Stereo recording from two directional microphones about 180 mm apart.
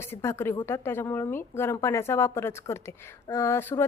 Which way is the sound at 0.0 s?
15° left (ahead or behind).